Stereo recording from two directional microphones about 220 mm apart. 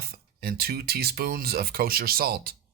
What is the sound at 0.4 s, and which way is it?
Speech, 45° right (ahead or behind).